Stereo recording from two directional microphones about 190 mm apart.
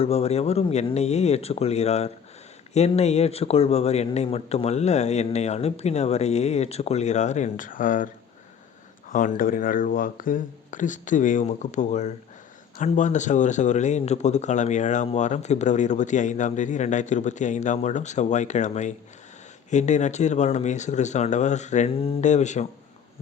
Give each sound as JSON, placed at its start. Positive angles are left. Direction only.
{"t": 0.0, "sound": "speech", "side_deg": 35}